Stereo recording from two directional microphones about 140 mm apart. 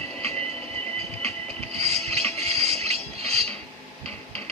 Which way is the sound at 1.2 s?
45° right (ahead or behind).